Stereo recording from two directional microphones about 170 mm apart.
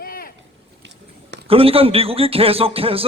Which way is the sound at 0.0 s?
60° left (ahead or behind).